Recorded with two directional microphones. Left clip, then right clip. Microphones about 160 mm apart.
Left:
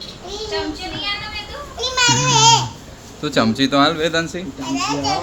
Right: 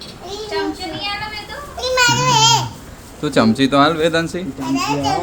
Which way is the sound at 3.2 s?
25° right (ahead or behind).